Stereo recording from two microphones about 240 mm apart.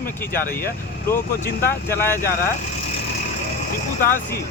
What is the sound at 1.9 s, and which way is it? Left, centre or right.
Speech, centre.